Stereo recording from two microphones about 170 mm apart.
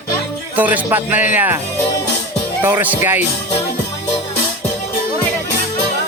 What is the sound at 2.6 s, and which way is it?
Speech, 10° right (ahead or behind).